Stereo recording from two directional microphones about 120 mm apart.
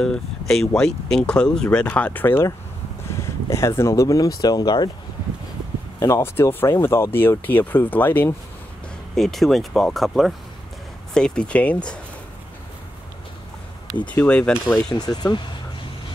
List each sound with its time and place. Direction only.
0.0 s speech: 5° left (ahead or behind); by 4.9 s 35° left (ahead or behind)
5.9 s speech: 25° left (ahead or behind)
9.1 s speech: centre (ahead or behind)
13.8 s speech: 10° left (ahead or behind)
15.0 s speech: 35° left (ahead or behind)